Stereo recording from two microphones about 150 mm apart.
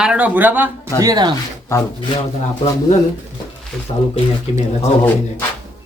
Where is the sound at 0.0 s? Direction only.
10° right (ahead or behind).